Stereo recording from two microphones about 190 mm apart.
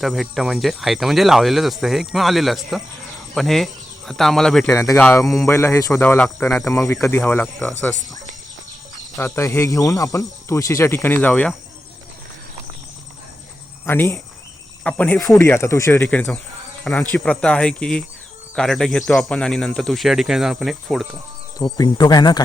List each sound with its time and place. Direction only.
0.0 s speech: centre (ahead or behind)
4.7 s speech: 15° left (ahead or behind)
5.5 s speech: 15° left (ahead or behind)
9.1 s speech: 15° left (ahead or behind)
13.8 s speech: 10° left (ahead or behind)
21.6 s speech: 20° left (ahead or behind)